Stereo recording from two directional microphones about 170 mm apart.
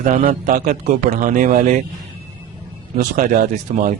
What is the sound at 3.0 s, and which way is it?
Speech, 50° right (ahead or behind).